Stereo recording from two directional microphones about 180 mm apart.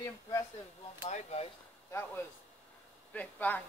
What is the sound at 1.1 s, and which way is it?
Speech, 35° left (ahead or behind).